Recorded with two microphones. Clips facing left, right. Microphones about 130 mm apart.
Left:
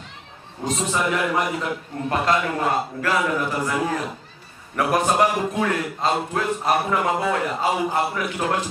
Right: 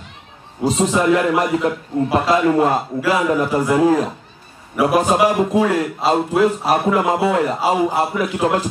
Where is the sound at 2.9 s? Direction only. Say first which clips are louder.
Right 6 dB; 20° right (ahead or behind).